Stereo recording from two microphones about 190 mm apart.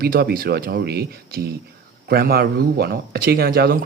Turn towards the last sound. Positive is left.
turn(degrees=-50)  # may be behind; listen again after turning